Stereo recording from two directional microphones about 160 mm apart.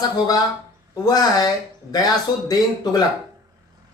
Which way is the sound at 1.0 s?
25° left (ahead or behind).